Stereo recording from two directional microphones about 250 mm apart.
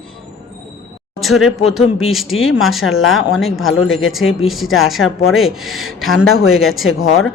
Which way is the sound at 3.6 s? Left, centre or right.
Left.